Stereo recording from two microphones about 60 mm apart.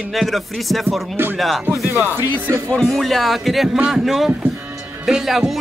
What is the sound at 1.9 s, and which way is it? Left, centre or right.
Speech, right.